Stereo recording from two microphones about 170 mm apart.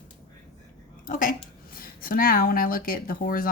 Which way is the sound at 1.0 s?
50° left (ahead or behind).